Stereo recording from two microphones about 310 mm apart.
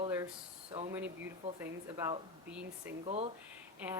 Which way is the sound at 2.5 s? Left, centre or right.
Centre.